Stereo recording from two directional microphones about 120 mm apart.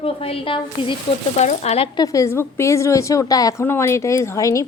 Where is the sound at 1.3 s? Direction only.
75° left (ahead or behind).